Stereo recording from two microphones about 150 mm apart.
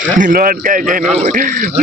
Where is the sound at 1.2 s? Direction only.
60° right (ahead or behind).